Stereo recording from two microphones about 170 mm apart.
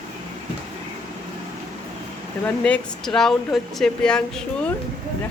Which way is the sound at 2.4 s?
5° left (ahead or behind).